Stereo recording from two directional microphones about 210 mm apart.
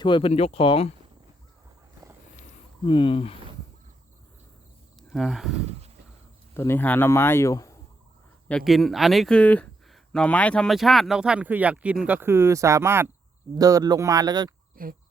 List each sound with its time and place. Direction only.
0.0 s speech: 25° left (ahead or behind)
2.8 s speech: 25° left (ahead or behind)
4.9 s speech: centre (ahead or behind)
6.5 s speech: 10° left (ahead or behind)
8.4 s speech: centre (ahead or behind); by 14.5 s 20° right (ahead or behind)
14.8 s speech: 40° right (ahead or behind)